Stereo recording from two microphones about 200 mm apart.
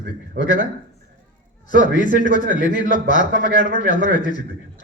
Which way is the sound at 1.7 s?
40° left (ahead or behind).